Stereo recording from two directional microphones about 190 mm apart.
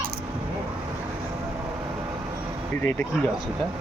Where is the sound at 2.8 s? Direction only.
10° left (ahead or behind).